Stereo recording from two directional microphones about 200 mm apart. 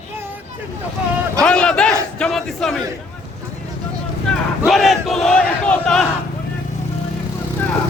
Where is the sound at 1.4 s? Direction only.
5° left (ahead or behind).